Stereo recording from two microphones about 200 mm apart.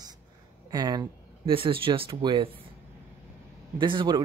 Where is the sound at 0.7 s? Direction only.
20° right (ahead or behind).